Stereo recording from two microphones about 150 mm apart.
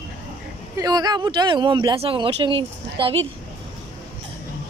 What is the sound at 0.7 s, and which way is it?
Speech, 25° right (ahead or behind).